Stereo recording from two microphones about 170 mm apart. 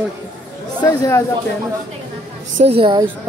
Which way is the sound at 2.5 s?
35° right (ahead or behind).